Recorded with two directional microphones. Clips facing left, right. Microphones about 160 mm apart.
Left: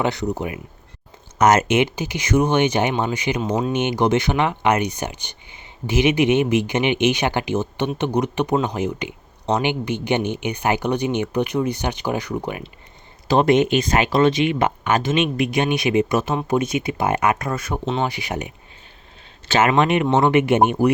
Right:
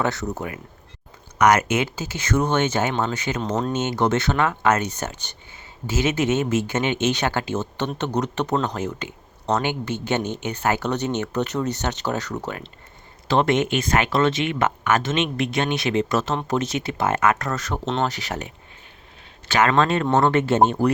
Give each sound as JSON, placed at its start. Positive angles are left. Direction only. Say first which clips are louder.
{"t": 0.0, "sound": "speech", "louder": "left 3 dB", "side_deg": 15}